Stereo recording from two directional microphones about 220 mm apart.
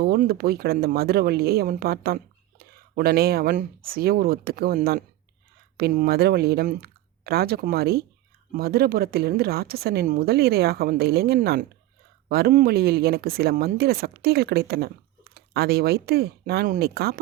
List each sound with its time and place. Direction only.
0.0 s speech: 45° right (ahead or behind)